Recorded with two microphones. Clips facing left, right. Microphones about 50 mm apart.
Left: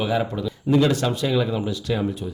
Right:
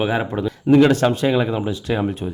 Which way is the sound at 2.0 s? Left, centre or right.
Right.